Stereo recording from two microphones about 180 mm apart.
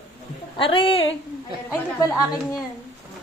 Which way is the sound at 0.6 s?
30° left (ahead or behind).